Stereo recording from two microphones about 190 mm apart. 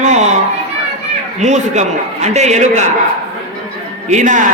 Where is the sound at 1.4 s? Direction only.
35° right (ahead or behind).